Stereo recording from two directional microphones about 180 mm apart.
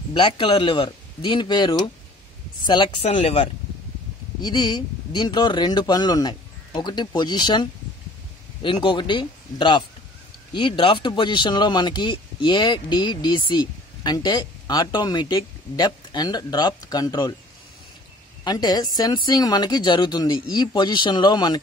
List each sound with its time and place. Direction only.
0.1 s speech: 25° left (ahead or behind)
4.4 s speech: 25° left (ahead or behind)
8.6 s speech: 25° left (ahead or behind)
18.4 s speech: 25° left (ahead or behind)